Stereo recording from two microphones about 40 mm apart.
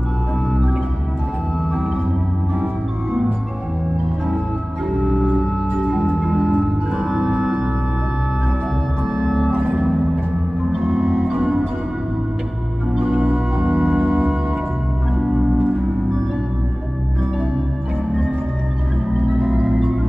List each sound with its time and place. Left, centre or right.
5.0 s organ: centre
6.2 s singing bowl: centre
7.3 s organ: centre
9.1 s organ: centre
10.9 s organ: centre
11.3 s music: centre
12.9 s music: right
15.1 s organ: centre
19.6 s music: centre